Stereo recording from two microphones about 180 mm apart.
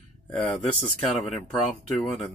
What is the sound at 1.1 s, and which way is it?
Speech, 35° left (ahead or behind).